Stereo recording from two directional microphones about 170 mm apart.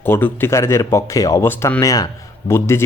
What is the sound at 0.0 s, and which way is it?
A man's voice, 15° left (ahead or behind).